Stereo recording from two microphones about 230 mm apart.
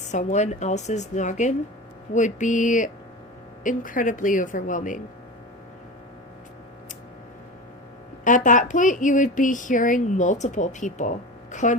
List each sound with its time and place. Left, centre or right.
0.1 s speech: left
8.4 s speech: left